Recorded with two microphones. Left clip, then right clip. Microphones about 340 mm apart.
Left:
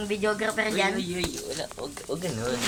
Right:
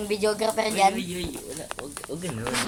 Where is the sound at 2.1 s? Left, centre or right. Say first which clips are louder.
Left 4 dB; left.